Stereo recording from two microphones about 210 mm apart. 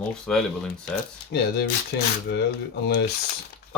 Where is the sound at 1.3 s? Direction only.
55° left (ahead or behind).